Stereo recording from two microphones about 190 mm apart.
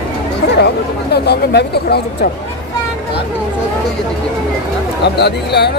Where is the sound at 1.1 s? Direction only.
60° left (ahead or behind).